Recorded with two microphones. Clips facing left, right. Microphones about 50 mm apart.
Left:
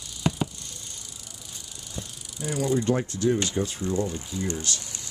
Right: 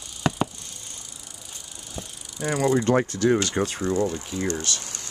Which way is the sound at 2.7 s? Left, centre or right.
Right.